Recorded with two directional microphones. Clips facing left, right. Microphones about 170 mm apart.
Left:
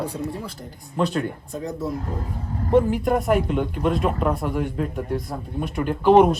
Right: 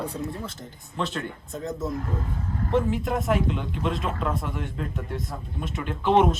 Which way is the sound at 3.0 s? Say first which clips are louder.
Left 5 dB; centre (ahead or behind).